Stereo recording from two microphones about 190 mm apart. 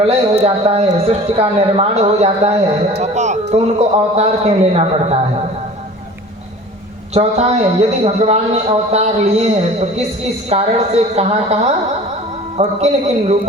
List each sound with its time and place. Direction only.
0.0 s speech: 30° right (ahead or behind)
7.1 s speech: 35° right (ahead or behind)
10.5 s speech: 35° right (ahead or behind)
12.5 s speech: 35° right (ahead or behind)